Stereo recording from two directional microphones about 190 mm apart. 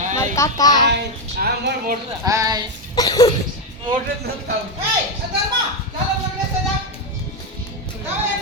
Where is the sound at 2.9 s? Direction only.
20° left (ahead or behind).